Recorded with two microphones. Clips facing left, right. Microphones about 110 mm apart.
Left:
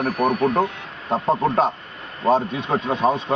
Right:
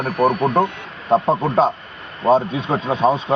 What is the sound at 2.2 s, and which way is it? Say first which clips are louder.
Speech: right 3 dB; centre (ahead or behind).